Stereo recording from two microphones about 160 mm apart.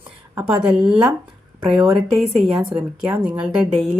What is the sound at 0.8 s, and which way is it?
A woman's voice, 5° right (ahead or behind).